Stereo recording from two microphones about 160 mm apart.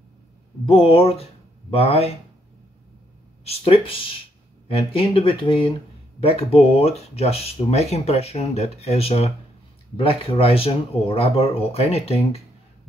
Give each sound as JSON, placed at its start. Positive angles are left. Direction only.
{"t": 0.7, "sound": "speech", "side_deg": 35}
{"t": 3.4, "sound": "speech", "side_deg": 40}